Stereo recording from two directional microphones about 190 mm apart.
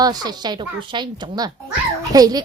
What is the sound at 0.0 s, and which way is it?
A woman's voice, 20° right (ahead or behind).